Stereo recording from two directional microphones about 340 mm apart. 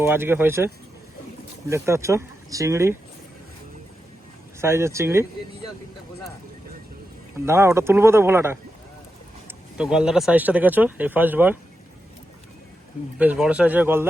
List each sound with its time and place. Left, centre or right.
0.0 s speech: centre
1.7 s speech: centre
4.6 s speech: centre
7.4 s speech: centre
13.1 s speech: centre